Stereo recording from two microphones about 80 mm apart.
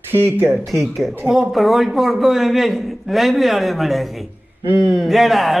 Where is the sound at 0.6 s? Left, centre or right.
Centre.